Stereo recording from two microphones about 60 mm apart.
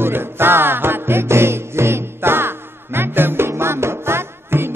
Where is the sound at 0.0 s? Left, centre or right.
Right.